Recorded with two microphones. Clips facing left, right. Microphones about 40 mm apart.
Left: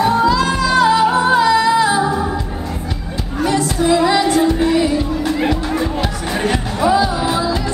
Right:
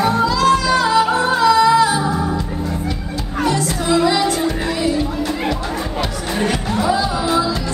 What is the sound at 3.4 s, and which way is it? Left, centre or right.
Music, centre.